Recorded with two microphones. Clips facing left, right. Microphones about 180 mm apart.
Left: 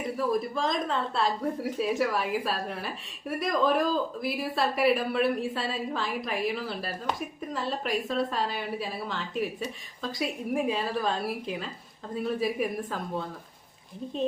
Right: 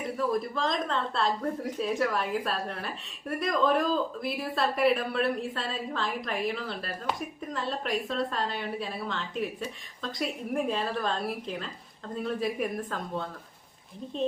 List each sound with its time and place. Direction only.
0.2 s a woman's voice: 5° left (ahead or behind)